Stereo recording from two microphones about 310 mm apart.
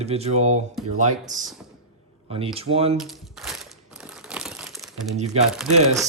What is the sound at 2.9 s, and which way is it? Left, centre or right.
Speech, centre.